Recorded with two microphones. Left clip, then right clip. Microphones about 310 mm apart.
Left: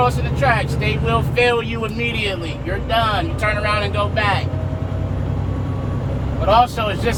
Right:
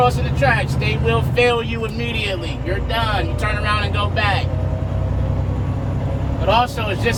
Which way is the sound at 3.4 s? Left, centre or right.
Left.